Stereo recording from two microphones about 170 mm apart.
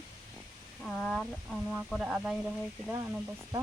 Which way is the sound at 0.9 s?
Centre (ahead or behind).